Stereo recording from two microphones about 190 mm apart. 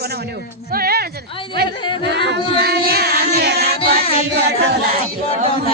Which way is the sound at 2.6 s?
55° right (ahead or behind).